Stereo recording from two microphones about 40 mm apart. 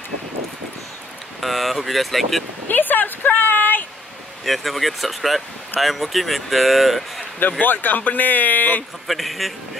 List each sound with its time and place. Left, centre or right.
1.4 s speech: centre
2.7 s speech: left
4.5 s speech: centre
7.6 s speech: left
9.0 s speech: centre